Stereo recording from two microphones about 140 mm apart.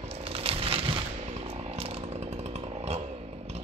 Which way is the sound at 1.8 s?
45° right (ahead or behind).